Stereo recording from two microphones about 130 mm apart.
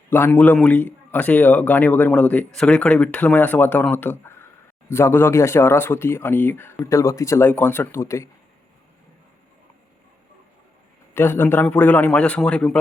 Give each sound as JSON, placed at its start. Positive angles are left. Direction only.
{"t": 0.1, "sound": "a man's voice", "side_deg": 15}
{"t": 11.1, "sound": "a man's voice", "side_deg": 15}